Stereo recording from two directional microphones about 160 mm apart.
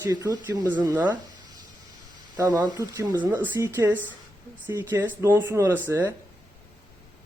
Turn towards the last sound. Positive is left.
turn(degrees=-15)  # may be behind; listen again after turning